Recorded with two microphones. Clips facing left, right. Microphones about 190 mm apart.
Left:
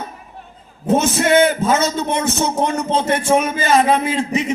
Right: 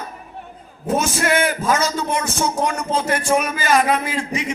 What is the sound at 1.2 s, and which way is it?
A man's voice, 25° left (ahead or behind).